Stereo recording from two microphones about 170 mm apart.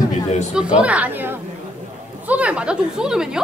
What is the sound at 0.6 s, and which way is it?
Speech, 5° right (ahead or behind).